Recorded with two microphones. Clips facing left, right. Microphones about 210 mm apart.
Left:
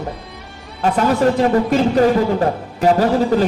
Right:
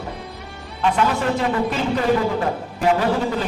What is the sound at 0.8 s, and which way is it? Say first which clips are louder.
A man's voice: left 5 dB; 40° left (ahead or behind).